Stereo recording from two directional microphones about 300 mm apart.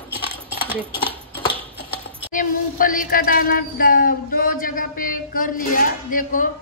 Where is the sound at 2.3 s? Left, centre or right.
Left.